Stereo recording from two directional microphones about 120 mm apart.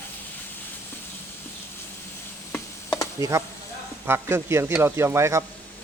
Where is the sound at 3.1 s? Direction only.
25° right (ahead or behind).